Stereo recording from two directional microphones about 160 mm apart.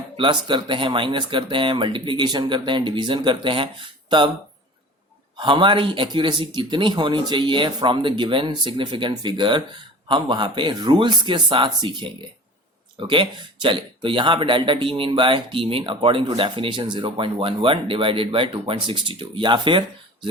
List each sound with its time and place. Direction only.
0.2 s speech: 30° right (ahead or behind)
5.4 s speech: 30° right (ahead or behind)